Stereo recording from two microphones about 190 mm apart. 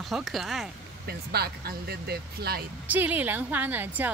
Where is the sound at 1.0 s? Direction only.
55° right (ahead or behind).